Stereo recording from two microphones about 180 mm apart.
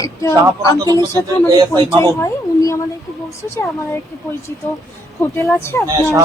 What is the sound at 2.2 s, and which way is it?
A woman's voice, 15° left (ahead or behind).